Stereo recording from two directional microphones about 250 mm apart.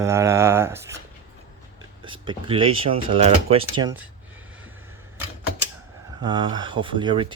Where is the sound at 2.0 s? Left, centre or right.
Centre.